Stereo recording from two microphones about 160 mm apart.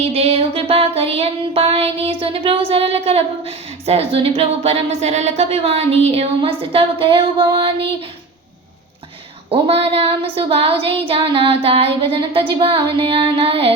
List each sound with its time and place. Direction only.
0.1 s music: 40° right (ahead or behind)
9.5 s music: 35° right (ahead or behind)